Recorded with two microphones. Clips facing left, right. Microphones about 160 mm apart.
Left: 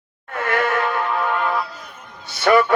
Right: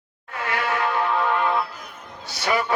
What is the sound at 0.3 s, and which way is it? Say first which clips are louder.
Insect: left 6 dB; 50° left (ahead or behind).